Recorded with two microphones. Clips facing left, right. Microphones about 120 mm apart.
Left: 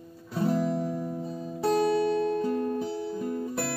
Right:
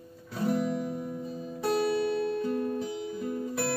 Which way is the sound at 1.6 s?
30° left (ahead or behind).